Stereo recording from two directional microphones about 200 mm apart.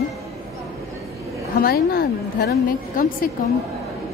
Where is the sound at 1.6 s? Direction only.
50° left (ahead or behind).